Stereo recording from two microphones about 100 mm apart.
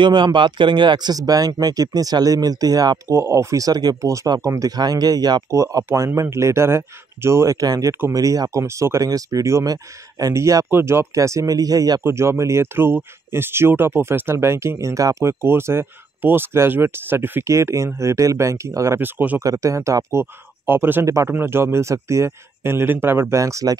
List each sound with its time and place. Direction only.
0.0 s speech: 50° right (ahead or behind); by 7.5 s 30° right (ahead or behind)
7.6 s speech: 40° right (ahead or behind)
12.0 s speech: 25° right (ahead or behind)
18.9 s speech: 20° right (ahead or behind)
19.4 s speech: 35° right (ahead or behind)